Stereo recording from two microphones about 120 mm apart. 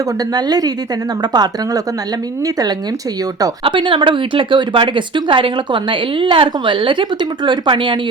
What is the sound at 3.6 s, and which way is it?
Speech, 45° right (ahead or behind).